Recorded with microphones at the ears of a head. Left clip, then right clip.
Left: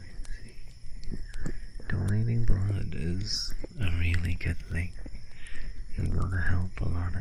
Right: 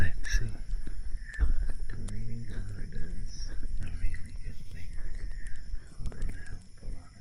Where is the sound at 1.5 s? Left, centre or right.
Left.